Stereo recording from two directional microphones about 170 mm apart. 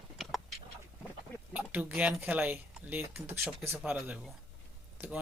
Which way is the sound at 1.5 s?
10° right (ahead or behind).